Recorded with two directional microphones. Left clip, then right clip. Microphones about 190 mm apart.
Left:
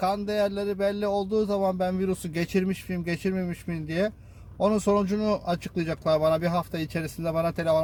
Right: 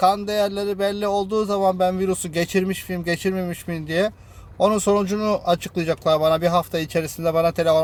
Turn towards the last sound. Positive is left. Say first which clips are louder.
# right 7 dB
turn(degrees=-50)  # may be behind; listen again after turning